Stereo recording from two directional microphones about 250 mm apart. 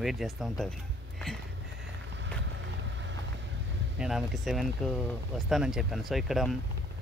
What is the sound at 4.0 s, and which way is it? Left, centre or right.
Speech, centre.